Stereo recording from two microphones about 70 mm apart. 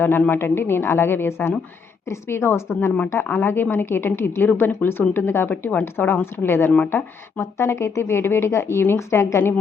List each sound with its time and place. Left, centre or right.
0.0 s speech: left
7.3 s speech: left